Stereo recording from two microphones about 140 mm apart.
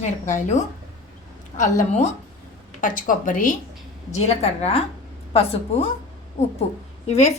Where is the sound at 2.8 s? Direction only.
70° left (ahead or behind).